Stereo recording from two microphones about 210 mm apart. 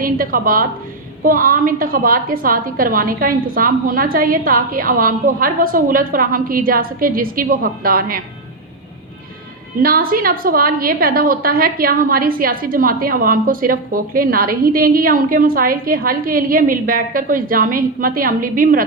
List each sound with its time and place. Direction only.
0.0 s a woman's voice: 45° right (ahead or behind)
9.8 s a woman's voice: 45° right (ahead or behind)